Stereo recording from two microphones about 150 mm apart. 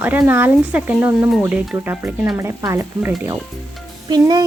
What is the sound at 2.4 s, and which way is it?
Speech, 20° right (ahead or behind).